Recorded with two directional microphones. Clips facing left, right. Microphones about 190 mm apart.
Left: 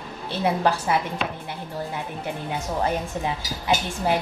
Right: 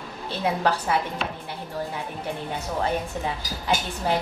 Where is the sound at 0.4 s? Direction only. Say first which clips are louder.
Left 2 dB; 5° left (ahead or behind).